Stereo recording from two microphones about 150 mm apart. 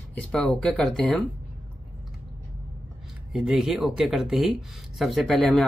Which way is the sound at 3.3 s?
5° right (ahead or behind).